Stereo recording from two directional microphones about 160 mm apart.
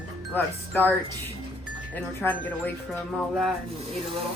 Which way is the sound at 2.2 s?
10° left (ahead or behind).